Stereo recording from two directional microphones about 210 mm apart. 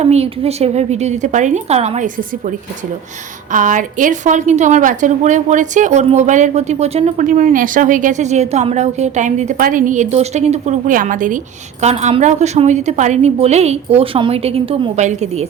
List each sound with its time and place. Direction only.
0.0 s a woman's voice: 30° right (ahead or behind)
3.5 s a woman's voice: 40° right (ahead or behind)